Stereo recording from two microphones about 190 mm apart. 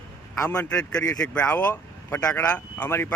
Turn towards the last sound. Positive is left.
turn(degrees=10)  # may be behind; listen again after turning